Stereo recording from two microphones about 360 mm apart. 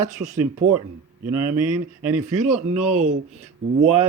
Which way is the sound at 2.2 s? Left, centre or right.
Centre.